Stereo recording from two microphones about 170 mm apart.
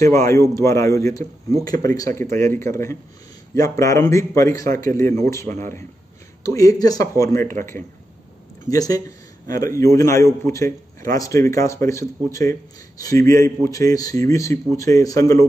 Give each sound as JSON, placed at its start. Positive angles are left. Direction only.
{"t": 0.0, "sound": "a man's voice", "side_deg": 15}
{"t": 8.6, "sound": "a man's voice", "side_deg": 20}